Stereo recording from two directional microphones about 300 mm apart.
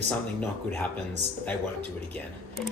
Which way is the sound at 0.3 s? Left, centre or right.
Centre.